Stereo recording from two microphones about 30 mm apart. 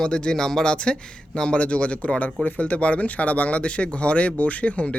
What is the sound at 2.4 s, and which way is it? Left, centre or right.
Speech, left.